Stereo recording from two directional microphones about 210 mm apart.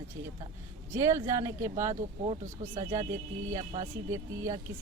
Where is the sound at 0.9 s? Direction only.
15° right (ahead or behind).